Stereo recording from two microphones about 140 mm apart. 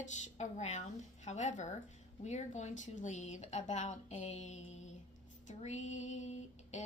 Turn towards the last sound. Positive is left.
turn(degrees=55)  # may be behind; listen again after turning